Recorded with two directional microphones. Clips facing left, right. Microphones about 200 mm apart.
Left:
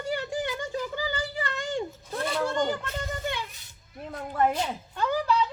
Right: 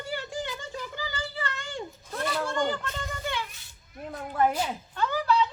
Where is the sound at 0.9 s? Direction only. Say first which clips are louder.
Left 4 dB; 15° left (ahead or behind).